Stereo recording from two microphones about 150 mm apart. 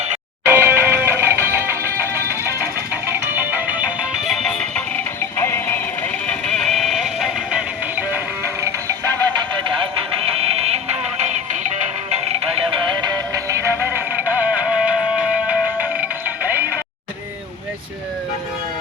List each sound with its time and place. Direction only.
0.4 s music: 15° right (ahead or behind); by 4.8 s centre (ahead or behind)
5.4 s music: 15° left (ahead or behind); by 7.6 s centre (ahead or behind)
9.6 s music: 35° right (ahead or behind)
12.7 s music: 30° right (ahead or behind); by 16.7 s 10° right (ahead or behind)